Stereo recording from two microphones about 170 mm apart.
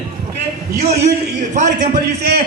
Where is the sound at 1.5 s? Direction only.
45° right (ahead or behind).